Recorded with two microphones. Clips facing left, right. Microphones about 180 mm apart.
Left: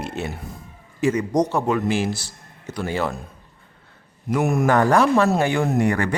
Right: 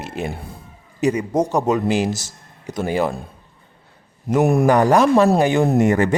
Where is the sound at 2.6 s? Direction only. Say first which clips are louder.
Right 4 dB; 15° right (ahead or behind).